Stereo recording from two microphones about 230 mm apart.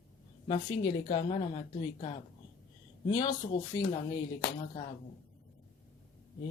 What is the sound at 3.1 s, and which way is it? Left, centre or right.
Speech, centre.